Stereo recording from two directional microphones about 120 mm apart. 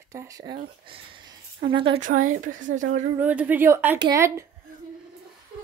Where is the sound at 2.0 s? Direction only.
90° right.